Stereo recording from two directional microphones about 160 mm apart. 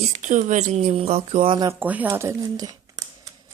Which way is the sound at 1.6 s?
10° right (ahead or behind).